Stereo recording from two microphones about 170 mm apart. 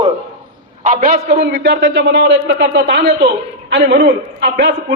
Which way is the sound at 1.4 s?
90° right.